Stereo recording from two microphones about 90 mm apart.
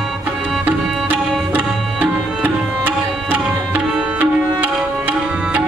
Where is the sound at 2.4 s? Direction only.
20° right (ahead or behind).